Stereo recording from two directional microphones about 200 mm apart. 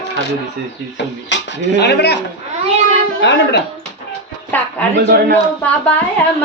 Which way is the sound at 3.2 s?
60° left (ahead or behind).